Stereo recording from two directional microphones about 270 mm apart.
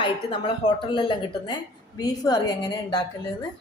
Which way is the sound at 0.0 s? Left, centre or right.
Centre.